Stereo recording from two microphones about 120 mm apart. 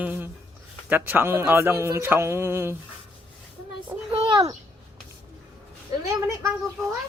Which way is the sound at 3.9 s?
20° right (ahead or behind).